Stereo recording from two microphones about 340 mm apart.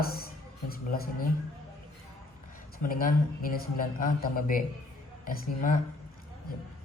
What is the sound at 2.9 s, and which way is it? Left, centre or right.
Speech, left.